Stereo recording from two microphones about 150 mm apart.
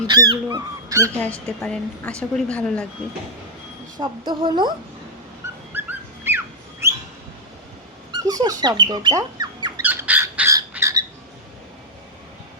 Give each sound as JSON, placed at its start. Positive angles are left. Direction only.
{"t": 0.4, "sound": "speech", "side_deg": -20}
{"t": 1.2, "sound": "a woman's voice", "side_deg": 5}
{"t": 3.9, "sound": "speech", "side_deg": -30}
{"t": 5.7, "sound": "dog", "side_deg": -15}
{"t": 8.1, "sound": "speech", "side_deg": -25}
{"t": 9.8, "sound": "bird", "side_deg": -10}